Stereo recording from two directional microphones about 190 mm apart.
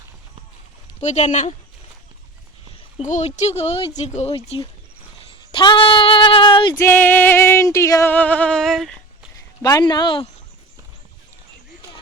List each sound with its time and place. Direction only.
1.0 s speech: 40° left (ahead or behind)
3.0 s speech: 40° left (ahead or behind)
6.7 s music: 10° left (ahead or behind)
9.6 s speech: 20° left (ahead or behind)